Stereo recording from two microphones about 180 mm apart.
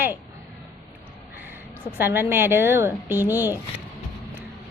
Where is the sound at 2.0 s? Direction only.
10° right (ahead or behind).